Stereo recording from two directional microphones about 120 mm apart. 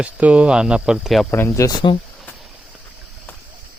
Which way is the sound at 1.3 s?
15° left (ahead or behind).